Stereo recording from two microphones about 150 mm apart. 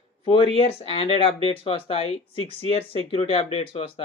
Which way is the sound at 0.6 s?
40° left (ahead or behind).